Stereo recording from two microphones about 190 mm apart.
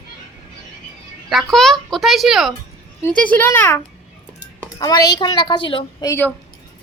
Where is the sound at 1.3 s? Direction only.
Centre (ahead or behind).